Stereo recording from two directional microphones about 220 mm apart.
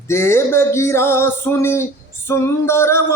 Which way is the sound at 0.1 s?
10° left (ahead or behind).